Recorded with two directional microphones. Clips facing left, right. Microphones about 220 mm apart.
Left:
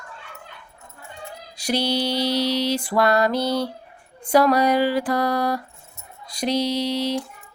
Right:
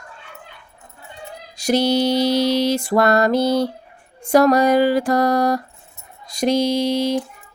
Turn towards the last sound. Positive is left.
turn(degrees=-45)  # may be behind; listen again after turning